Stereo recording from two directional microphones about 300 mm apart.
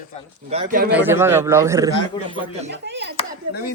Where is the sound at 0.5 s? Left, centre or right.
Right.